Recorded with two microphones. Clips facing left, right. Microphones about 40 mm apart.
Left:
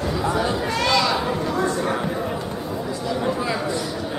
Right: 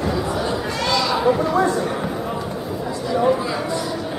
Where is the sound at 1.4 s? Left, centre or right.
Centre.